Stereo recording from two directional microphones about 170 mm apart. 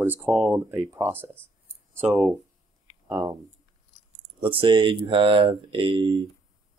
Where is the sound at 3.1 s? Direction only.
20° right (ahead or behind).